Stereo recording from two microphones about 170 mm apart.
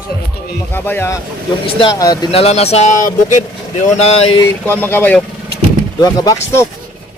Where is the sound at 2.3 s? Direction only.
35° left (ahead or behind).